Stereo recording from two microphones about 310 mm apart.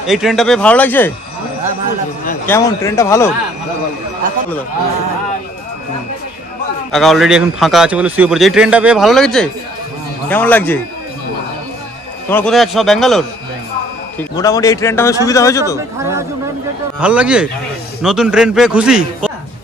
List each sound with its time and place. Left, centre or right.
0.0 s a man's voice: centre
2.4 s speech: centre
6.9 s a man's voice: centre
12.3 s a man's voice: centre
14.3 s speech: centre
16.0 s a man's voice: centre